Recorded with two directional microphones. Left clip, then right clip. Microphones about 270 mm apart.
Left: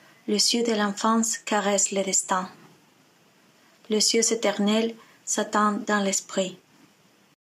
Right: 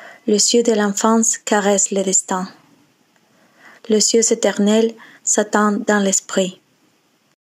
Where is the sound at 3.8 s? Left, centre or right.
Right.